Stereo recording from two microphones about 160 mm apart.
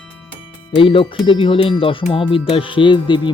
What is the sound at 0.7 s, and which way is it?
Speech, 35° left (ahead or behind).